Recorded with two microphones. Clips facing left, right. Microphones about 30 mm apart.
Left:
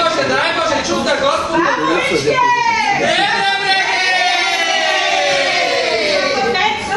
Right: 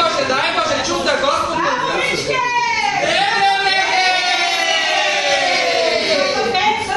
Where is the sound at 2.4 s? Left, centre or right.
Centre.